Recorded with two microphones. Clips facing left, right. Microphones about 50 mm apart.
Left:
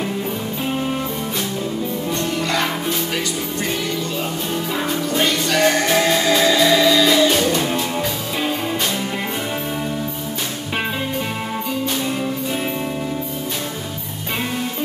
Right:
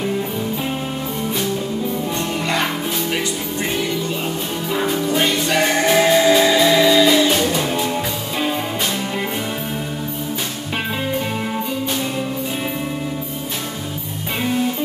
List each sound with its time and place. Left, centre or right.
2.4 s music: centre
4.7 s music: centre
5.0 s music: centre